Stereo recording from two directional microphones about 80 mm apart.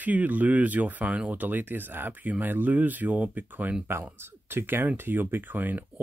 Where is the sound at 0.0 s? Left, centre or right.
Right.